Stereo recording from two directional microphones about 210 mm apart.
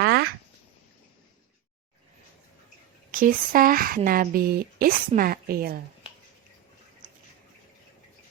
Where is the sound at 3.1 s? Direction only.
40° right (ahead or behind).